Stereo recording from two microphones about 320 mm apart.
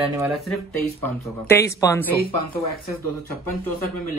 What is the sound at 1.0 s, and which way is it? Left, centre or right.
Speech, centre.